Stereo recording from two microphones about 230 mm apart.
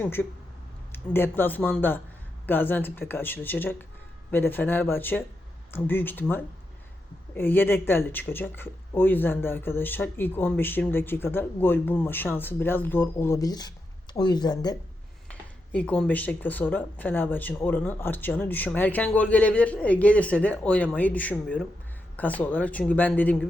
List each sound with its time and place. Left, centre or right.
0.0 s speech: centre
15.3 s speech: centre